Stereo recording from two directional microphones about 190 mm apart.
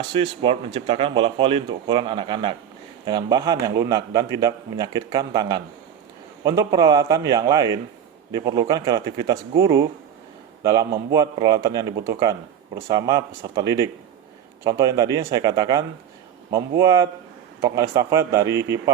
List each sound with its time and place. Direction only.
0.1 s a man's voice: 30° right (ahead or behind)